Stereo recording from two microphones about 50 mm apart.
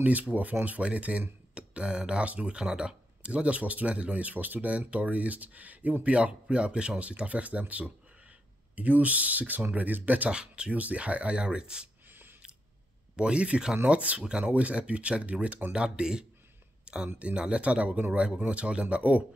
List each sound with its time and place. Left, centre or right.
0.0 s speech: right
6.1 s speech: right
10.3 s speech: centre
10.7 s speech: right
13.1 s speech: right
16.8 s a sound: centre
17.2 s speech: right